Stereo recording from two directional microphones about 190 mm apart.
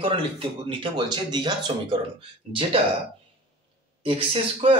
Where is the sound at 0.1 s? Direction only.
25° right (ahead or behind).